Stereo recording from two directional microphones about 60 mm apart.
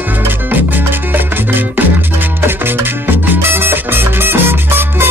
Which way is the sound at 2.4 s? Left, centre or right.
Right.